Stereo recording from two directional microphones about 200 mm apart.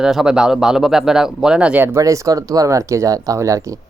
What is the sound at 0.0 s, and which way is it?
Speech, 5° right (ahead or behind).